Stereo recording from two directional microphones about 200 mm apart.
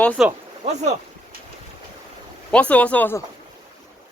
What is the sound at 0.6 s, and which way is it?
Speech, 35° right (ahead or behind).